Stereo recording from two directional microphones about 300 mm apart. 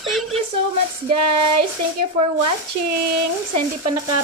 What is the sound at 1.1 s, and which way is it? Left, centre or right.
Child singing, right.